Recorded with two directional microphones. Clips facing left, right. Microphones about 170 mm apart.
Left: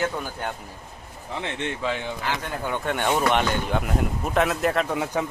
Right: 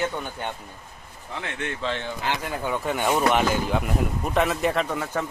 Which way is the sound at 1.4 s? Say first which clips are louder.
Left 2 dB; 20° left (ahead or behind).